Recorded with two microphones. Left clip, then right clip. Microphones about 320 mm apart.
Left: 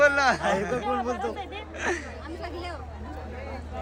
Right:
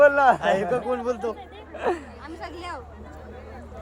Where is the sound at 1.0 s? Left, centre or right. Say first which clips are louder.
Right 2 dB; right.